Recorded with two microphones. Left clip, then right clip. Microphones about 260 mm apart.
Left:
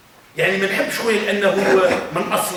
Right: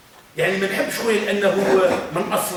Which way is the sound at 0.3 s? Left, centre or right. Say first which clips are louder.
Left 2 dB; centre.